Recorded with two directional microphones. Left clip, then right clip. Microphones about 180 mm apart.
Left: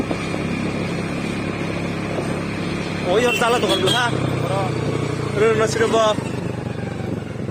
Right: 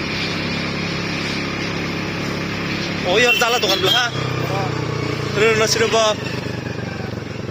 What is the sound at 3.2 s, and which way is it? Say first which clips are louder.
Speech: right 2 dB; 5° left (ahead or behind).